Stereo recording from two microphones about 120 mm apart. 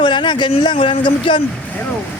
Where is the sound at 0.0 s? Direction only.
40° left (ahead or behind).